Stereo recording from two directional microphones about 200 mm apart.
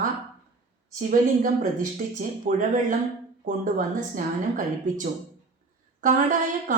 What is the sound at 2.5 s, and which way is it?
Speech, 40° right (ahead or behind).